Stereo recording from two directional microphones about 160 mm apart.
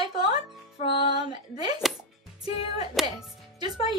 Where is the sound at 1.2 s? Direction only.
25° right (ahead or behind).